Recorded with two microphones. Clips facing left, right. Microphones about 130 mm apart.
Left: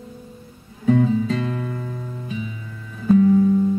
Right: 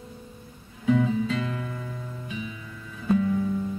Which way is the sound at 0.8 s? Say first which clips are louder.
Left 5 dB; 40° left (ahead or behind).